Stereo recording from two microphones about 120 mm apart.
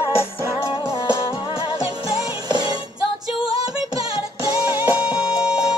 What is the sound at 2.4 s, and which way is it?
Music, 35° right (ahead or behind).